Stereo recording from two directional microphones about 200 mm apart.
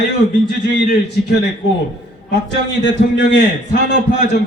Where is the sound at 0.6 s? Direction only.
60° left (ahead or behind).